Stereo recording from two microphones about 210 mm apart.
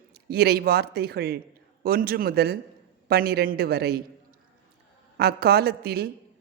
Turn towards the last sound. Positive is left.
turn(degrees=-50)  # may be behind; listen again after turning